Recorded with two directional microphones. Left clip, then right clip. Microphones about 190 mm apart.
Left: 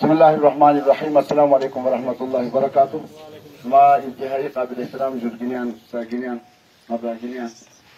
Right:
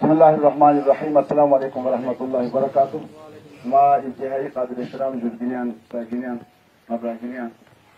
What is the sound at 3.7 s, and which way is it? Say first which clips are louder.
A man's voice: left 3 dB; centre (ahead or behind).